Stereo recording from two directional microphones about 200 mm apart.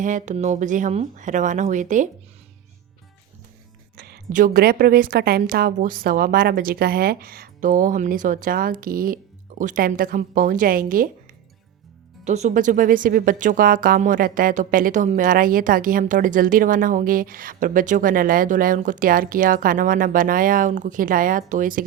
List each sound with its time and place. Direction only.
0.0 s speech: 40° right (ahead or behind)
3.9 s speech: 50° right (ahead or behind)
12.2 s speech: 35° right (ahead or behind)